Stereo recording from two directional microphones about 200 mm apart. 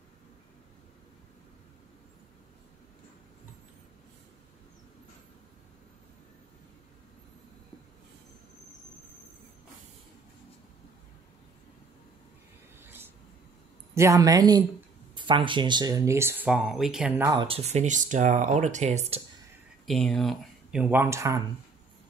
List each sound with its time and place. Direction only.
12.8 s a sound: 10° right (ahead or behind)
13.9 s speech: 15° right (ahead or behind)
17.3 s speech: 25° right (ahead or behind)
19.9 s speech: centre (ahead or behind); by 21.4 s 15° right (ahead or behind)